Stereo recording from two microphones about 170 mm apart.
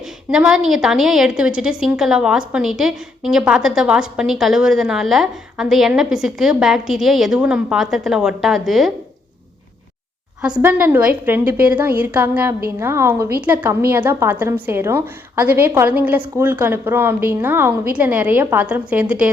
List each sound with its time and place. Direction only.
0.3 s a woman's voice: 5° right (ahead or behind)
10.4 s a woman's voice: 10° right (ahead or behind)